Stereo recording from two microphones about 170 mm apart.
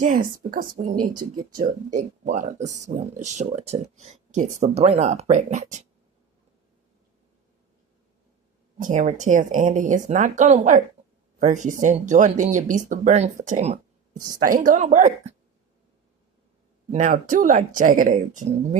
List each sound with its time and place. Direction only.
0.0 s speech: 55° right (ahead or behind)
8.8 s speech: 45° right (ahead or behind)
16.9 s speech: 45° right (ahead or behind)